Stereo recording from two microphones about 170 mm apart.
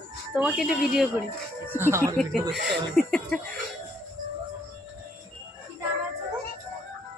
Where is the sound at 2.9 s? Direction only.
5° left (ahead or behind).